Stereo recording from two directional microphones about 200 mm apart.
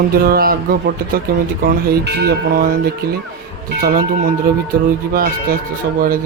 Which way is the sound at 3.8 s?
45° right (ahead or behind).